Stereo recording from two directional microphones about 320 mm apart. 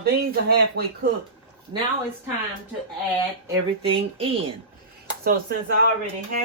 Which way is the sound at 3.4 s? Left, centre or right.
Centre.